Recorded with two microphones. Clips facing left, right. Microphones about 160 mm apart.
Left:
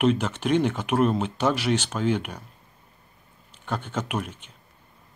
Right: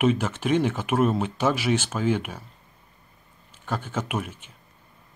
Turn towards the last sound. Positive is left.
turn(degrees=-5)  # may be behind; listen again after turning